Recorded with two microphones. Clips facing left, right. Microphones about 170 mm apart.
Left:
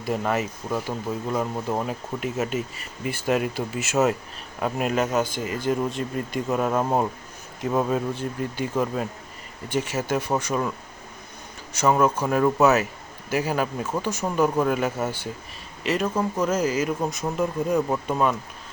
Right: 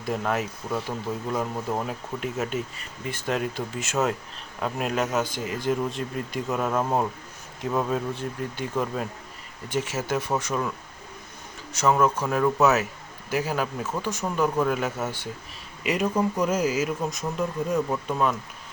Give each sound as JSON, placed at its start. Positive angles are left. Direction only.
{"t": 0.0, "sound": "speech", "side_deg": 0}
{"t": 11.7, "sound": "speech", "side_deg": 0}
{"t": 15.8, "sound": "speech", "side_deg": -10}
{"t": 17.7, "sound": "speech", "side_deg": 20}
{"t": 18.1, "sound": "speech", "side_deg": 5}